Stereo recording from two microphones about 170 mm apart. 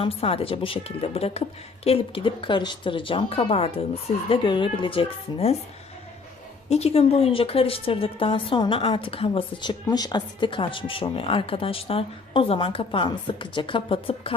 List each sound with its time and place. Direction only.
0.0 s a woman's voice: 35° left (ahead or behind)
6.7 s a woman's voice: 40° left (ahead or behind)